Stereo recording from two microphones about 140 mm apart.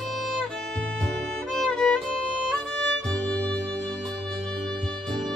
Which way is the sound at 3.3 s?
5° left (ahead or behind).